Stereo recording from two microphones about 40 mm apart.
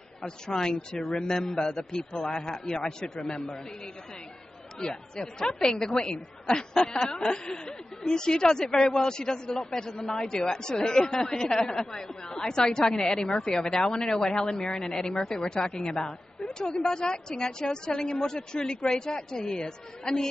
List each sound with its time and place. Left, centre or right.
0.5 s speech: centre
4.7 s speech: centre